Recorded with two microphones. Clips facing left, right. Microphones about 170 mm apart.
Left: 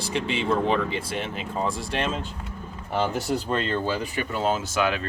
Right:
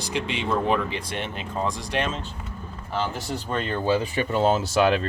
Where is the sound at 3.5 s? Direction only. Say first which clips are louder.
Left 2 dB; 5° right (ahead or behind).